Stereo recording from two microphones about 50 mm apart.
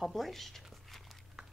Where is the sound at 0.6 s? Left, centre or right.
Centre.